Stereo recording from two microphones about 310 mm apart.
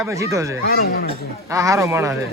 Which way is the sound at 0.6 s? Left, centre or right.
Left.